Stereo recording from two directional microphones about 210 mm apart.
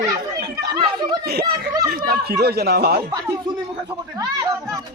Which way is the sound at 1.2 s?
50° right (ahead or behind).